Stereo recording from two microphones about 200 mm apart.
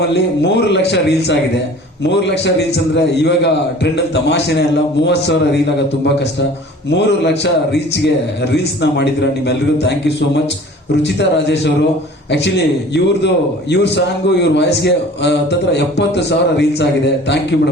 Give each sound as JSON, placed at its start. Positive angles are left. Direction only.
{"t": 0.1, "sound": "a man's voice", "side_deg": 60}